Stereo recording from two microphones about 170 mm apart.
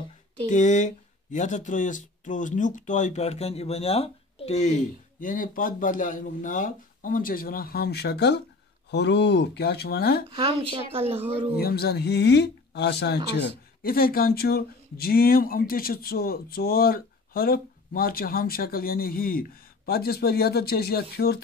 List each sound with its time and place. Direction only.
0.5 s speech: 45° left (ahead or behind); by 8.4 s 80° left
8.9 s speech: 90° left; by 10.2 s 65° left (ahead or behind)
10.3 s speech: 30° right (ahead or behind)
11.5 s speech: 65° left (ahead or behind)